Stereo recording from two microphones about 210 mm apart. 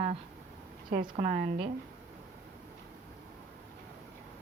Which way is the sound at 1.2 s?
40° right (ahead or behind).